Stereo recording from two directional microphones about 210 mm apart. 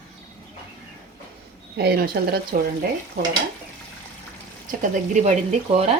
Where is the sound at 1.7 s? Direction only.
50° right (ahead or behind).